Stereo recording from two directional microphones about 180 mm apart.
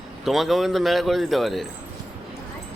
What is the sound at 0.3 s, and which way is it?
A man's voice, centre (ahead or behind).